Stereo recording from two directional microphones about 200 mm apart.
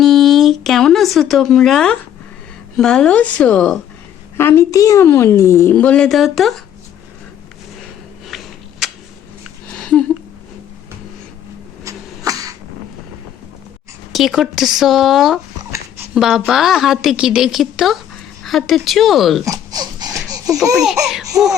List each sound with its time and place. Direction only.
0.0 s a sound: centre (ahead or behind)
2.7 s a woman's voice: 5° left (ahead or behind)
8.3 s a sound: centre (ahead or behind)
11.9 s cough: 15° right (ahead or behind)
14.1 s a woman's voice: centre (ahead or behind)
19.5 s dog: 20° right (ahead or behind)
20.7 s a woman's voice: centre (ahead or behind)